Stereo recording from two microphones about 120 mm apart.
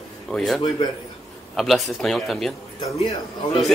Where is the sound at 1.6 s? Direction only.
Centre (ahead or behind).